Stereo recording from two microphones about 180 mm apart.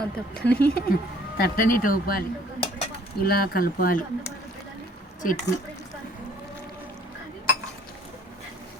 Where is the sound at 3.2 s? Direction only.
55° left (ahead or behind).